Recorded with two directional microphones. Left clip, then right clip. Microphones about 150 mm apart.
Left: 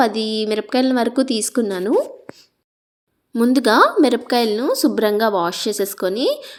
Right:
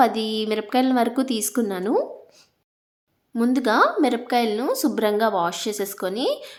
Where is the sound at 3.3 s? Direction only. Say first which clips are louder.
Left 5 dB; 30° left (ahead or behind).